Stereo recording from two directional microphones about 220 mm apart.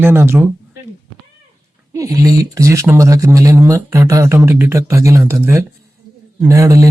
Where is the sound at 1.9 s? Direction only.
15° right (ahead or behind).